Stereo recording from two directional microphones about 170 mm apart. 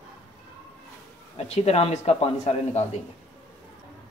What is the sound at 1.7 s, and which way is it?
Speech, 35° left (ahead or behind).